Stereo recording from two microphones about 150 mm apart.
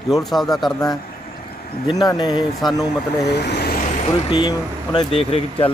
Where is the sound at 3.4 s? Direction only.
90° left.